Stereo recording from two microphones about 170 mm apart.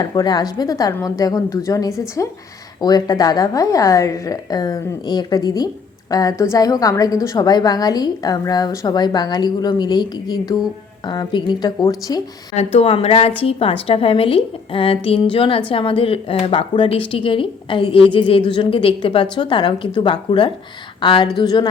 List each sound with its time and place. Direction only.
0.0 s a woman's voice: 25° left (ahead or behind)
12.5 s a woman's voice: 35° left (ahead or behind)